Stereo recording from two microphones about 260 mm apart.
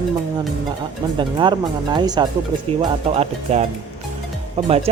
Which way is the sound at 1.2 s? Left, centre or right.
Centre.